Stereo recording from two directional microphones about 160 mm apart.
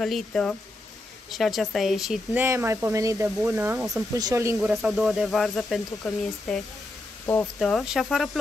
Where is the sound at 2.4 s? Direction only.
15° right (ahead or behind).